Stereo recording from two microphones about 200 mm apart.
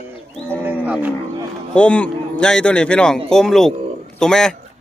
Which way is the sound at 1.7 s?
5° left (ahead or behind).